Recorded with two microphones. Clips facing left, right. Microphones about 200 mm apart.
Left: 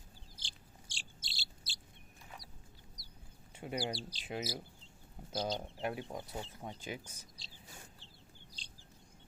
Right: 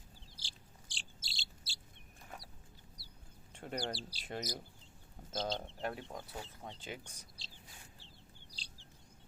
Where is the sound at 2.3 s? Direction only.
50° right (ahead or behind).